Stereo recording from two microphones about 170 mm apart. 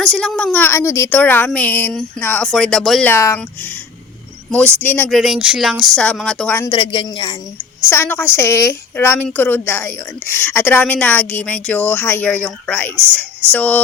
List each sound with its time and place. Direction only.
0.0 s a woman's voice: 5° left (ahead or behind)
3.1 s a woman's voice: 15° left (ahead or behind)
4.5 s a woman's voice: 10° left (ahead or behind)
5.1 s speech: centre (ahead or behind)
6.7 s a woman's voice: 30° left (ahead or behind)
7.9 s a woman's voice: 15° left (ahead or behind)